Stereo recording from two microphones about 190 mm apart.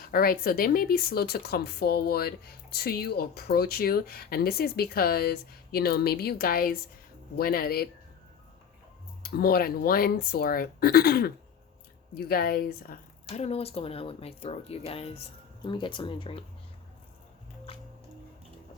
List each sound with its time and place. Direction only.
0.0 s speech: 50° left (ahead or behind)
9.2 s speech: 55° left (ahead or behind)
13.3 s speech: 35° left (ahead or behind)
17.7 s music: 30° left (ahead or behind)